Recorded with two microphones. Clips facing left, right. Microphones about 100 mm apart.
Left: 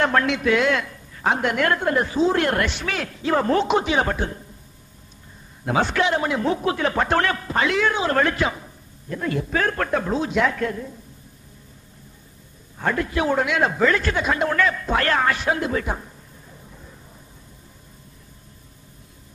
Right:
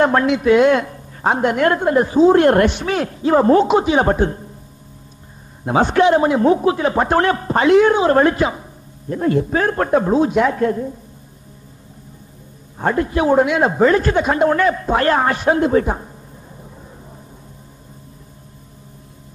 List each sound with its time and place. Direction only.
0.0 s a man's voice: 20° right (ahead or behind)
5.7 s a man's voice: 20° right (ahead or behind)
5.9 s a man's voice: 30° right (ahead or behind)
9.1 s a man's voice: 35° right (ahead or behind)
12.7 s a man's voice: 30° right (ahead or behind)